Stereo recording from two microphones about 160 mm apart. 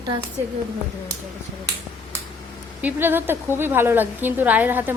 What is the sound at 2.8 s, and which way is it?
A woman's voice, 10° right (ahead or behind).